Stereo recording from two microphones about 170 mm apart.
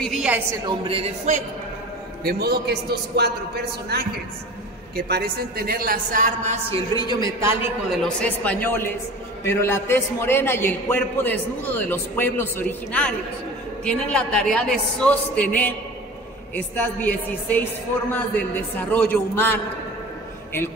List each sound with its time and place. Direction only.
0.0 s a woman's voice: centre (ahead or behind)
0.7 s a woman's voice: 35° right (ahead or behind)
2.2 s a man's voice: 70° right (ahead or behind); by 6.8 s 40° right (ahead or behind)
7.0 s a man's voice: 25° left (ahead or behind)
8.0 s a man's voice: 5° left (ahead or behind)